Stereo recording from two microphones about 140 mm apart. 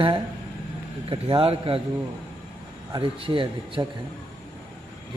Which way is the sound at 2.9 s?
40° right (ahead or behind).